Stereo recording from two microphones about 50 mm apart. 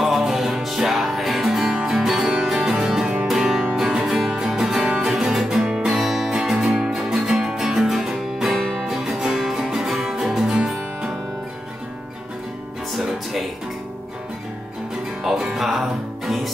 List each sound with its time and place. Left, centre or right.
0.0 s music: centre
5.9 s music: centre
12.9 s music: centre
15.2 s music: centre